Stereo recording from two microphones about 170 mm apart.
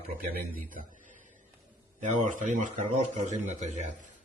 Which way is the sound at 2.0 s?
45° right (ahead or behind).